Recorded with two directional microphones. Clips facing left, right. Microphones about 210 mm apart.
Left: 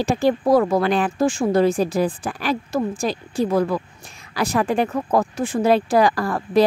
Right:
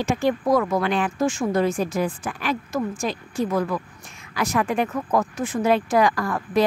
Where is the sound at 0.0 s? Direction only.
35° left (ahead or behind).